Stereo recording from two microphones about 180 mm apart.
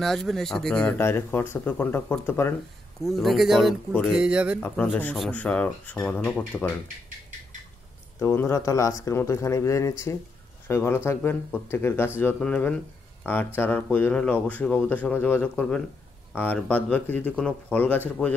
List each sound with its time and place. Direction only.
0.0 s speech: centre (ahead or behind)
3.0 s speech: centre (ahead or behind)
4.6 s speech: 10° left (ahead or behind)
8.2 s speech: 15° left (ahead or behind)